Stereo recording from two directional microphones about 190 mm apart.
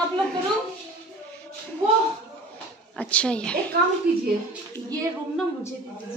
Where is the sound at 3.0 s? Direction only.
5° left (ahead or behind).